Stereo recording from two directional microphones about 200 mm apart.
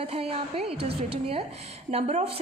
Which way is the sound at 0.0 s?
30° right (ahead or behind).